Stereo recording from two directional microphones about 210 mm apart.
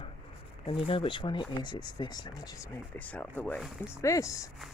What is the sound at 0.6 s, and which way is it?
Speech, 25° left (ahead or behind).